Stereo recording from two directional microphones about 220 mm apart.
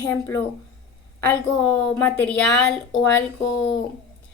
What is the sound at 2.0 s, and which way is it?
A woman's voice, 5° left (ahead or behind).